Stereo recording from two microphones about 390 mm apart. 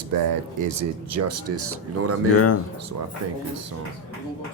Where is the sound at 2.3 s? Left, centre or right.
Left.